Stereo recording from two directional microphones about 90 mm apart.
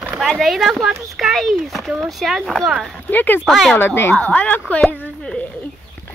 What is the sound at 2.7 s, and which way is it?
Speech, 5° right (ahead or behind).